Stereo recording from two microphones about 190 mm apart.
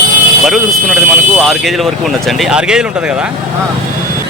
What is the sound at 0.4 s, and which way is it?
Speech, centre (ahead or behind).